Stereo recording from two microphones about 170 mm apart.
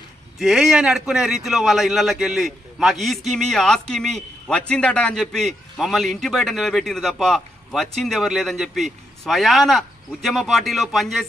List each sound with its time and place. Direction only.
0.4 s a man's voice: 5° right (ahead or behind)